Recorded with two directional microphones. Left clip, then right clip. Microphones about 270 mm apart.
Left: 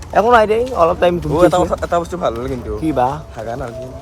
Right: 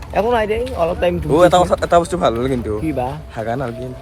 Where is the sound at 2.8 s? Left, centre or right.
Centre.